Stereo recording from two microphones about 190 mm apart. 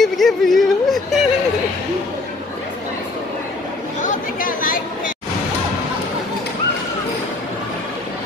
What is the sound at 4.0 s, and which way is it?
Chatter, 45° left (ahead or behind).